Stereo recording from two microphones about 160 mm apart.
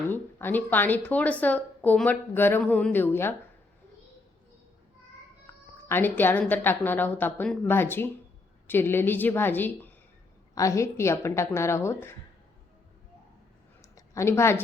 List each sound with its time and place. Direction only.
0.1 s a woman's voice: 10° left (ahead or behind)
5.5 s cat: 15° left (ahead or behind)
5.9 s a woman's voice: 10° left (ahead or behind)
13.9 s a sound: 20° left (ahead or behind)